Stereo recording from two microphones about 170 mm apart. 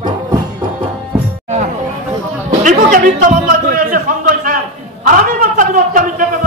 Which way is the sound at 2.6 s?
50° right (ahead or behind).